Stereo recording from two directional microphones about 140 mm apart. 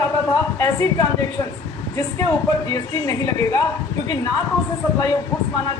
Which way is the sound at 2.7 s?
25° left (ahead or behind).